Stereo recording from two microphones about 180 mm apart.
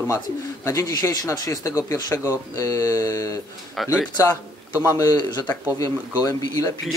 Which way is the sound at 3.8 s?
Centre (ahead or behind).